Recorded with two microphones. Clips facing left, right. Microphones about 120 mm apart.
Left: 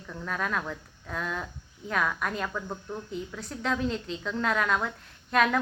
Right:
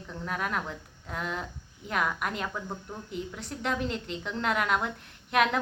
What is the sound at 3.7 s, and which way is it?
Speech, 65° right (ahead or behind).